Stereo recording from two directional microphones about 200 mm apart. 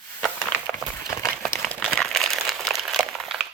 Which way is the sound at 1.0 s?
15° left (ahead or behind).